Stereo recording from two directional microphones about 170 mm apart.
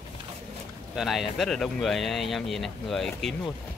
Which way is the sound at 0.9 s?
Centre (ahead or behind).